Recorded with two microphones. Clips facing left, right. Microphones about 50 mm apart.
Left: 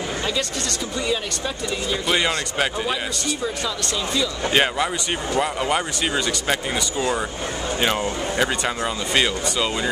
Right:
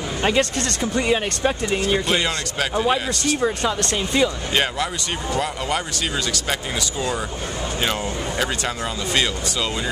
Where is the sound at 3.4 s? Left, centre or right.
Right.